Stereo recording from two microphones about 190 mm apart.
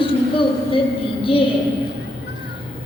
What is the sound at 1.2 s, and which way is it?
Speech, 30° left (ahead or behind).